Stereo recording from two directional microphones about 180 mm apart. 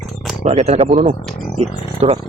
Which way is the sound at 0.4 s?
35° right (ahead or behind).